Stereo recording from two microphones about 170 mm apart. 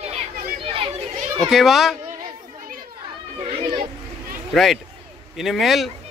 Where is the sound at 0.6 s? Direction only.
30° right (ahead or behind).